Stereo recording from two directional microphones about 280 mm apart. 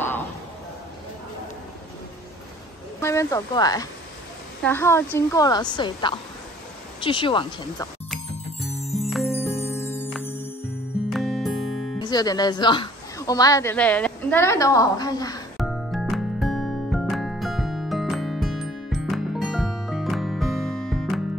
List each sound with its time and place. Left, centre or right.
3.0 s speech: centre
8.7 s music: centre
12.0 s speech: centre
15.5 s music: centre